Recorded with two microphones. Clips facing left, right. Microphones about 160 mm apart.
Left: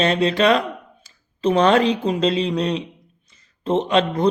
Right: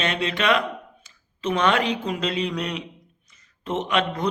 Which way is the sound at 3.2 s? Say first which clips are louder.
Left 8 dB; 30° left (ahead or behind).